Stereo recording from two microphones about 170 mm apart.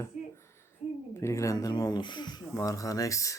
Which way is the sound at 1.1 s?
15° left (ahead or behind).